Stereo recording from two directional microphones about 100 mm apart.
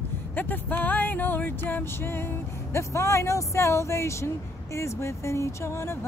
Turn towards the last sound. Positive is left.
turn(degrees=25)  # may be behind; listen again after turning